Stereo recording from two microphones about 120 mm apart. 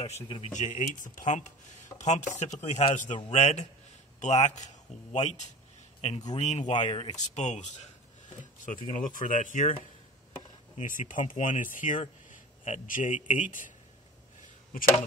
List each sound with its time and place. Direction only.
0.5 s speech: 90° left
2.0 s speech: 80° left
5.9 s a man's voice: 60° left (ahead or behind)
6.3 s speech: 75° left (ahead or behind)
6.7 s speech: 45° left (ahead or behind)
7.2 s speech: 75° left (ahead or behind)
8.9 s speech: 90° left
10.8 s speech: 90° left